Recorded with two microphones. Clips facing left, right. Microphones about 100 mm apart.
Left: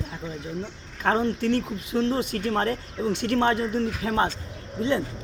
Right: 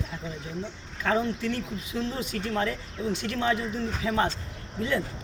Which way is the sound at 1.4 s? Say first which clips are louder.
Left 6 dB; 60° left (ahead or behind).